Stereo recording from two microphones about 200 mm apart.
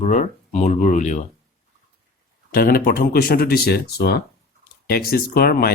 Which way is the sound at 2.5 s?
45° left (ahead or behind).